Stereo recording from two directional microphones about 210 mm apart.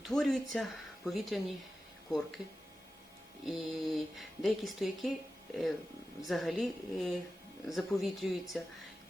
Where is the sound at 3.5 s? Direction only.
Centre (ahead or behind).